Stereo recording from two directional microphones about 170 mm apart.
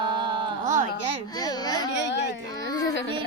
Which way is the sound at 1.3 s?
25° left (ahead or behind).